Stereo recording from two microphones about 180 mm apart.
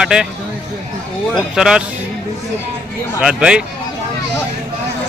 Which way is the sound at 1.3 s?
5° right (ahead or behind).